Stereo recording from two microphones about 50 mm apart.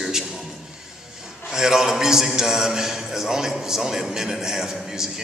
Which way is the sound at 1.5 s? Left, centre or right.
Centre.